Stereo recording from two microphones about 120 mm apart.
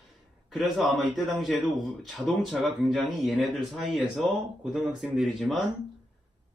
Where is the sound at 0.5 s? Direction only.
Centre (ahead or behind).